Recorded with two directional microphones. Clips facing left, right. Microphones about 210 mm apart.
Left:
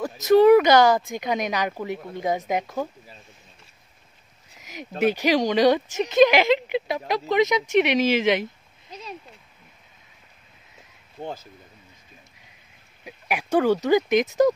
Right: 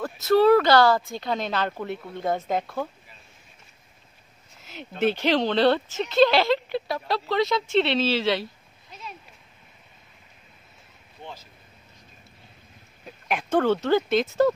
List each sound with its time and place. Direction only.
0.0 s speech: 15° left (ahead or behind)
4.6 s a sound: 15° left (ahead or behind)
5.0 s speech: 10° left (ahead or behind)
13.0 s speech: 10° left (ahead or behind)